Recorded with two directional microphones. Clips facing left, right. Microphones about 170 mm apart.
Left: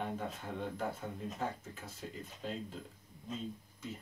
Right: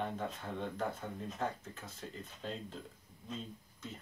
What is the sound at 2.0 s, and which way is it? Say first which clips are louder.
Speech: left 1 dB; 5° left (ahead or behind).